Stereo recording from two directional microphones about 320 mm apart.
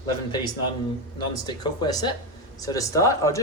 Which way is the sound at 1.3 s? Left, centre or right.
Centre.